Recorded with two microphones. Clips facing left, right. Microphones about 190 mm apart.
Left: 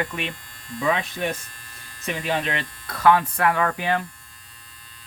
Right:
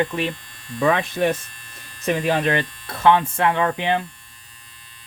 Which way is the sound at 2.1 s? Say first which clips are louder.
Right 6 dB; 55° right (ahead or behind).